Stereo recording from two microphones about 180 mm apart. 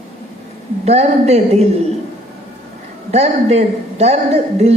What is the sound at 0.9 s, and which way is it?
Speech, 35° right (ahead or behind).